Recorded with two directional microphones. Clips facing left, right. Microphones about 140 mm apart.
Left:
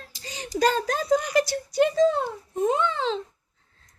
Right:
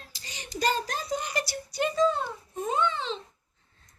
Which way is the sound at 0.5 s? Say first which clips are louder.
Left 6 dB; 90° left.